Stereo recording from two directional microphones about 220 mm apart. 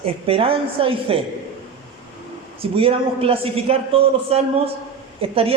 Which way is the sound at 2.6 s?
25° right (ahead or behind).